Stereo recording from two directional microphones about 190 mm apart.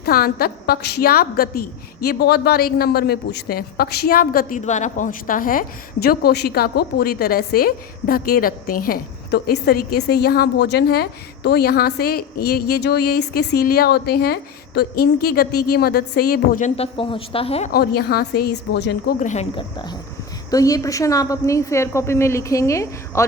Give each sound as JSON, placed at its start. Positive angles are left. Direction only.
{"t": 0.0, "sound": "a woman's voice", "side_deg": 55}
{"t": 17.7, "sound": "a woman's voice", "side_deg": 55}
{"t": 19.2, "sound": "speech", "side_deg": 40}
{"t": 19.5, "sound": "a woman's voice", "side_deg": 20}